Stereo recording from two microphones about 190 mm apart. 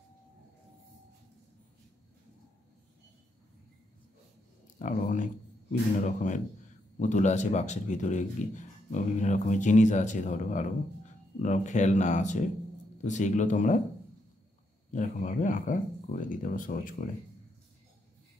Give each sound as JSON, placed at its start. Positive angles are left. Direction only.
{"t": 4.7, "sound": "speech", "side_deg": 40}
{"t": 14.9, "sound": "speech", "side_deg": 45}